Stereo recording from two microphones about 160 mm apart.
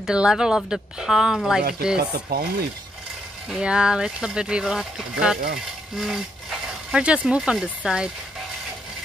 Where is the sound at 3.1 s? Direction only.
5° right (ahead or behind).